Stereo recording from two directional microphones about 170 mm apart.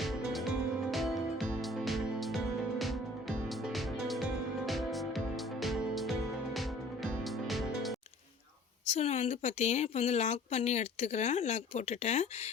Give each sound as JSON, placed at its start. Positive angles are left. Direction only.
{"t": 0.0, "sound": "music", "side_deg": 0}
{"t": 8.9, "sound": "a woman's voice", "side_deg": 40}